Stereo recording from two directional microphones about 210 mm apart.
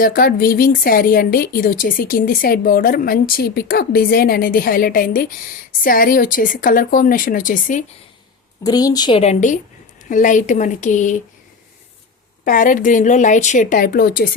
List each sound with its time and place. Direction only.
0.0 s a woman's voice: 45° left (ahead or behind)
8.6 s a woman's voice: 20° left (ahead or behind); by 11.2 s 35° left (ahead or behind)
12.5 s a woman's voice: 40° left (ahead or behind)